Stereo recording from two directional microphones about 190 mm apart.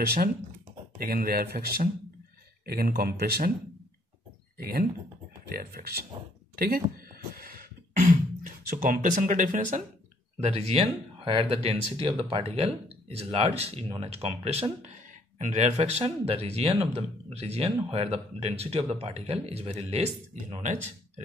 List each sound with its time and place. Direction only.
0.0 s speech: 55° right (ahead or behind)
5.5 s speech: 50° right (ahead or behind)
7.3 s music: 50° right (ahead or behind)
8.6 s speech: 45° right (ahead or behind)
10.4 s speech: 30° right (ahead or behind)